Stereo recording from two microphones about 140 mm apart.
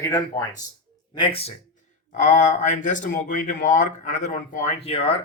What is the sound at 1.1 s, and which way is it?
Speech, 40° left (ahead or behind).